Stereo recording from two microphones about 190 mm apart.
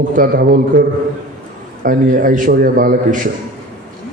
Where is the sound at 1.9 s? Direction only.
45° right (ahead or behind).